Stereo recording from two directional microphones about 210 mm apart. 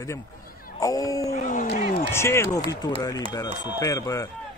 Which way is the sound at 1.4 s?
40° left (ahead or behind).